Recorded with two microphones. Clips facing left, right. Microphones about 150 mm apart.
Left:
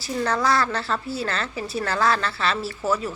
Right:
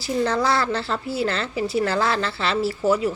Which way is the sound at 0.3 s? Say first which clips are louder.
Left 2 dB; 25° right (ahead or behind).